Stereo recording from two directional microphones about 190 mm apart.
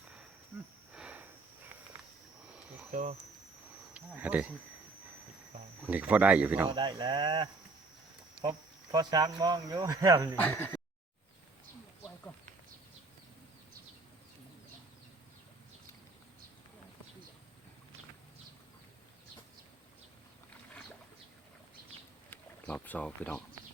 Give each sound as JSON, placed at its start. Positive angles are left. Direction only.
{"t": 0.9, "sound": "a sound", "side_deg": -5}
{"t": 2.9, "sound": "speech", "side_deg": -40}
{"t": 3.9, "sound": "insect", "side_deg": -10}
{"t": 5.8, "sound": "speech", "side_deg": -5}
{"t": 6.7, "sound": "speech", "side_deg": -25}
{"t": 10.3, "sound": "speech", "side_deg": 10}
{"t": 22.3, "sound": "boat", "side_deg": 10}